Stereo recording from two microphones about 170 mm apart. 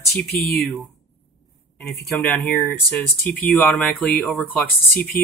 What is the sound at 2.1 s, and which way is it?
Speech, 10° left (ahead or behind).